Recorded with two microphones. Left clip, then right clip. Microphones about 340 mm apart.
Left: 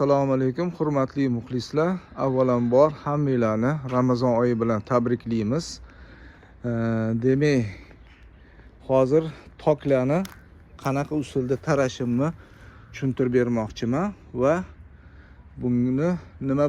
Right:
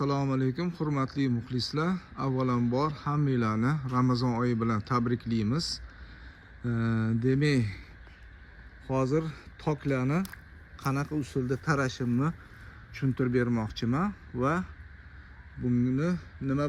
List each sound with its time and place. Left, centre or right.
0.0 s a man's voice: centre
8.9 s a man's voice: centre
15.7 s speech: left
16.0 s speech: centre